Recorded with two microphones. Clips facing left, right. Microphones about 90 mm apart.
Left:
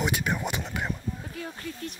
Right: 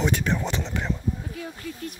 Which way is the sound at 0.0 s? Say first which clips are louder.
Right 3 dB; 10° left (ahead or behind).